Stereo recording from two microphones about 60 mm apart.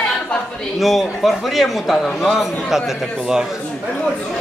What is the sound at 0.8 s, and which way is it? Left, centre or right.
A man's voice, centre.